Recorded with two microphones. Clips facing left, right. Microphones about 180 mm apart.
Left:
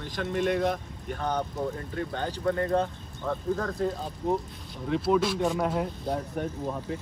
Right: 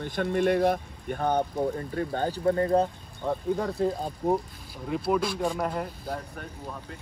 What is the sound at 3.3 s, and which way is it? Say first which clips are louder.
Speech: right 1 dB; 15° right (ahead or behind).